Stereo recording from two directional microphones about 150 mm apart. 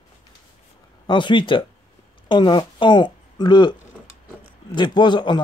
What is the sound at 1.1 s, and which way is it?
Speech, 30° left (ahead or behind).